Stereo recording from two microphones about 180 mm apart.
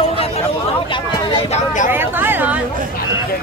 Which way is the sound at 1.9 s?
10° right (ahead or behind).